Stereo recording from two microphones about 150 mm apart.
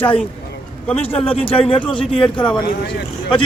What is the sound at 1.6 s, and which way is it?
Speech, 35° left (ahead or behind).